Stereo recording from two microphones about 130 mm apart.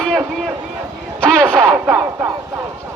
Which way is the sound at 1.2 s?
10° left (ahead or behind).